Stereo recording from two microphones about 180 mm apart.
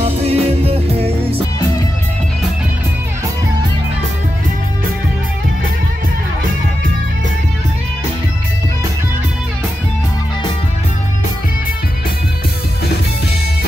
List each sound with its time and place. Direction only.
0.0 s music: 35° right (ahead or behind)